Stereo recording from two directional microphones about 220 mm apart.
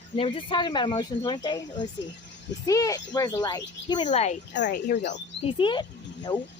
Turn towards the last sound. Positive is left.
turn(degrees=20)  # may be behind; listen again after turning